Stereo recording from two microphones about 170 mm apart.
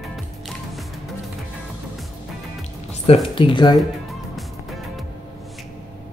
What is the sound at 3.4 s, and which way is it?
Speech, 30° left (ahead or behind).